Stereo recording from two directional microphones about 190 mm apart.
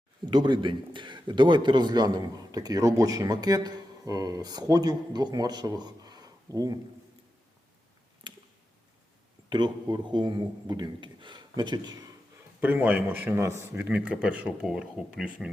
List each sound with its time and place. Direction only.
0.3 s a man's voice: 25° right (ahead or behind)
8.2 s a sound: 25° right (ahead or behind)
9.5 s a man's voice: 25° right (ahead or behind)
12.5 s a man's voice: 10° right (ahead or behind)